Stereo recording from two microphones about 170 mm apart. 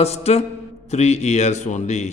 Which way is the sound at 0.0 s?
40° left (ahead or behind).